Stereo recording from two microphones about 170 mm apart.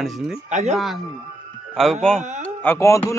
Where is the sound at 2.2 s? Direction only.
45° right (ahead or behind).